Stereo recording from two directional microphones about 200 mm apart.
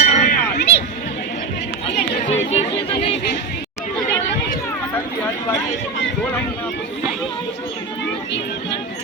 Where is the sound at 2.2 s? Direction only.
35° left (ahead or behind).